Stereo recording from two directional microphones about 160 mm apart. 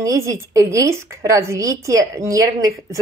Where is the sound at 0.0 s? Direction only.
20° right (ahead or behind).